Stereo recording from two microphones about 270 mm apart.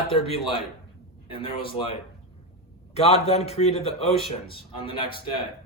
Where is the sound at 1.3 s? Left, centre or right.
Centre.